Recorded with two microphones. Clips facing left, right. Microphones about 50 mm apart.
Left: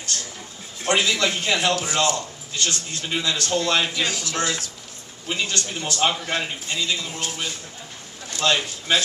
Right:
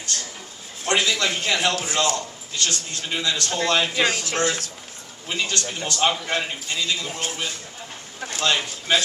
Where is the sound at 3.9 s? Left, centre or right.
Right.